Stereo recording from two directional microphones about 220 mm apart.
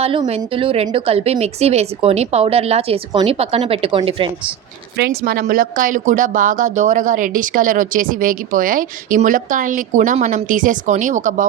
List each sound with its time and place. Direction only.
0.0 s a woman's voice: 25° right (ahead or behind)
4.9 s speech: 45° right (ahead or behind)